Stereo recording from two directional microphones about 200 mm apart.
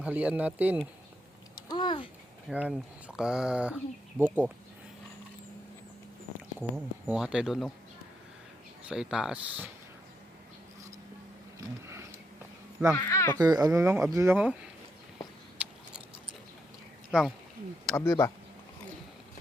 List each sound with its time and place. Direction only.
0.0 s speech: 5° right (ahead or behind)
1.6 s a sound: 20° left (ahead or behind)
2.5 s speech: 5° right (ahead or behind)
6.6 s speech: 5° right (ahead or behind)
8.9 s speech: 5° right (ahead or behind)
13.0 s speech: 15° left (ahead or behind)
13.4 s speech: 20° right (ahead or behind)
17.1 s speech: 5° right (ahead or behind)
17.9 s speech: 15° left (ahead or behind)